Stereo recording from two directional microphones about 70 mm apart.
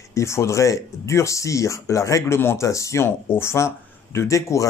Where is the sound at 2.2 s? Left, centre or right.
Left.